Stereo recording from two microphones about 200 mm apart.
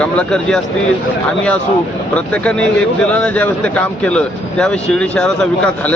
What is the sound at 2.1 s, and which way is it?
A man's voice, 5° left (ahead or behind).